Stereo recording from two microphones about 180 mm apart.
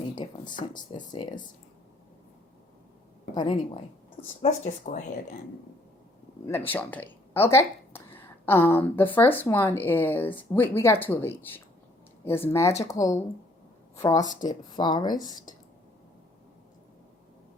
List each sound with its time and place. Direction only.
0.2 s speech: 30° left (ahead or behind)
3.3 s speech: 25° left (ahead or behind)
4.4 s speech: 40° left (ahead or behind)
6.7 s a woman's voice: 10° left (ahead or behind)